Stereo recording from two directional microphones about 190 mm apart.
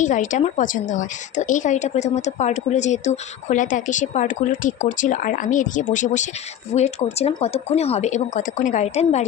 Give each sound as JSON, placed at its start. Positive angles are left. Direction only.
{"t": 0.0, "sound": "a woman's voice", "side_deg": 40}